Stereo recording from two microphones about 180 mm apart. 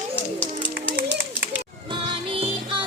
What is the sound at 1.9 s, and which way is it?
Music, 30° right (ahead or behind).